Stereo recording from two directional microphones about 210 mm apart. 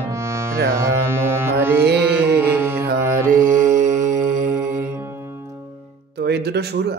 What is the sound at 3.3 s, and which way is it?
Mantra, 40° right (ahead or behind).